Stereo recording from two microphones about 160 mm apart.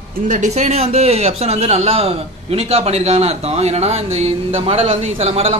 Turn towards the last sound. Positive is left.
turn(degrees=-40)  # may be behind; listen again after turning